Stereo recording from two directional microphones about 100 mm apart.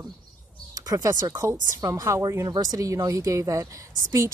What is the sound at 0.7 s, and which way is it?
Speech, 40° right (ahead or behind).